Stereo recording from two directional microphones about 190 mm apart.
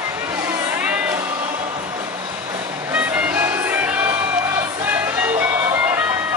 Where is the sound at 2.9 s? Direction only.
5° right (ahead or behind).